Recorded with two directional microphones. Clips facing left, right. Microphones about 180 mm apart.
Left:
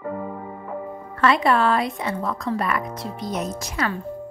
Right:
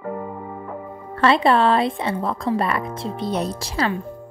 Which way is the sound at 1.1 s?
30° right (ahead or behind).